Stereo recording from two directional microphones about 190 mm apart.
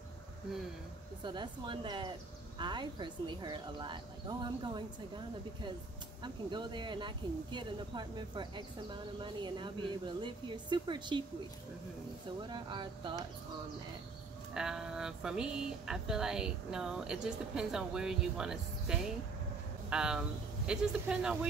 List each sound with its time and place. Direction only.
1.2 s speech: 25° right (ahead or behind)
12.4 s speech: 25° right (ahead or behind)
14.5 s speech: 5° right (ahead or behind)